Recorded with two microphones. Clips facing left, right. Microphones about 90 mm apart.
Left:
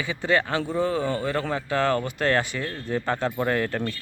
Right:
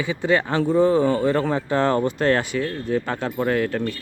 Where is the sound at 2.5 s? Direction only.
5° right (ahead or behind).